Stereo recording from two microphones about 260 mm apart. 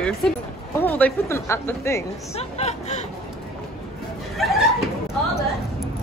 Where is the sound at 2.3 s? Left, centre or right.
Left.